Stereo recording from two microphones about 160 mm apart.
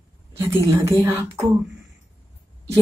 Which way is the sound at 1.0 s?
15° right (ahead or behind).